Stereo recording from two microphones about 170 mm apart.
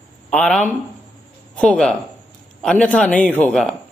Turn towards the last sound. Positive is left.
turn(degrees=5)  # may be behind; listen again after turning